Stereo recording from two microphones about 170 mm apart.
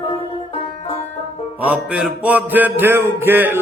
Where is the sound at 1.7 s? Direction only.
5° right (ahead or behind).